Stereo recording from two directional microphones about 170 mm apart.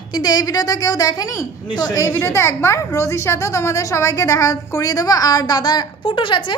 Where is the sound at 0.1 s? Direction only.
25° left (ahead or behind).